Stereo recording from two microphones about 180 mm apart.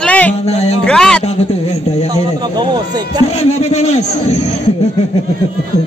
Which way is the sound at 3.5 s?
35° left (ahead or behind).